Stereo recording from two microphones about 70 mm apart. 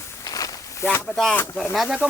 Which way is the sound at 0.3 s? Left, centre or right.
Left.